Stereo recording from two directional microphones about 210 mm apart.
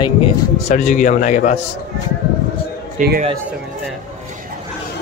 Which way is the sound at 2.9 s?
45° right (ahead or behind).